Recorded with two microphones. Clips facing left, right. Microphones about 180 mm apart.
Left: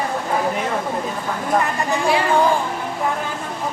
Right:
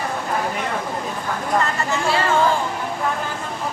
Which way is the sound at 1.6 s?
15° left (ahead or behind).